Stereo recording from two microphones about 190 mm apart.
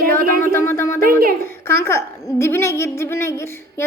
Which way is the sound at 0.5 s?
15° left (ahead or behind).